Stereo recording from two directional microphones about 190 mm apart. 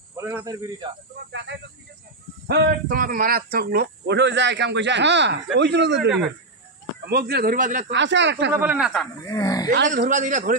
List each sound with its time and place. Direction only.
0.1 s speech: 15° right (ahead or behind)
1.3 s speech: 65° right (ahead or behind)
2.4 s a man's voice: 55° right (ahead or behind)
7.1 s speech: 55° right (ahead or behind)
7.9 s speech: 70° right (ahead or behind)
8.5 s speech: 5° right (ahead or behind)
9.2 s speech: 20° left (ahead or behind)
9.8 s speech: 45° right (ahead or behind)